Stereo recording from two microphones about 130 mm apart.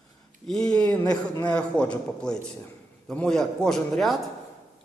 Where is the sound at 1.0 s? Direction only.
30° left (ahead or behind).